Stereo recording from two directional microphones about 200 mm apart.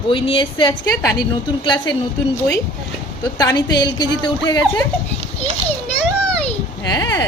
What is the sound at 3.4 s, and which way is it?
Speech, 20° left (ahead or behind).